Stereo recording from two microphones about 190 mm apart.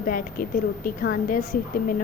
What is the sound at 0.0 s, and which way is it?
A woman's voice, 45° left (ahead or behind).